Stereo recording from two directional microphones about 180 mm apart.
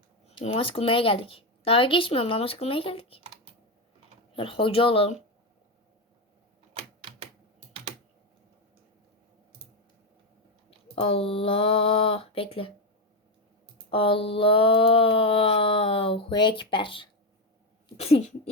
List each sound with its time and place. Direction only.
0.3 s speech: 35° left (ahead or behind)
4.4 s speech: 30° left (ahead or behind)
6.7 s typewriter: 30° right (ahead or behind)
10.7 s speech: 30° left (ahead or behind)
13.9 s a sound: 30° left (ahead or behind)
17.8 s speech: 35° left (ahead or behind)